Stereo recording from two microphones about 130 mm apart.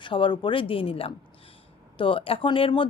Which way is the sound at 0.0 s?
40° left (ahead or behind).